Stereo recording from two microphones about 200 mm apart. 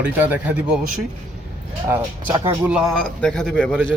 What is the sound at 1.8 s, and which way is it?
Speech, 10° right (ahead or behind).